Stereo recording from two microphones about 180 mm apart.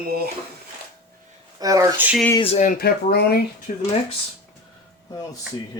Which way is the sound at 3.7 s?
45° left (ahead or behind).